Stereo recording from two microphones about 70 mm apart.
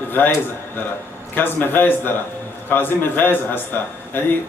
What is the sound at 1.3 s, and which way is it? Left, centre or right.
A man's voice, left.